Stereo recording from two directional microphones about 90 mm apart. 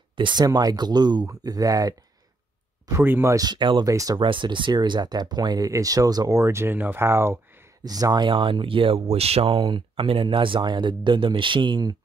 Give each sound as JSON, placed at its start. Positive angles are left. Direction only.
{"t": 0.1, "sound": "speech", "side_deg": -60}
{"t": 0.5, "sound": "speech", "side_deg": -45}
{"t": 2.9, "sound": "speech", "side_deg": -25}
{"t": 3.3, "sound": "speech", "side_deg": -55}
{"t": 3.8, "sound": "speech", "side_deg": -40}
{"t": 4.2, "sound": "speech", "side_deg": -65}
{"t": 6.3, "sound": "speech", "side_deg": -30}
{"t": 7.8, "sound": "speech", "side_deg": -45}